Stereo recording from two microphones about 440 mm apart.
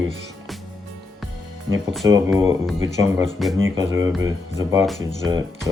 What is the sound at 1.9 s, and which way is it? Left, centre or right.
Speech, centre.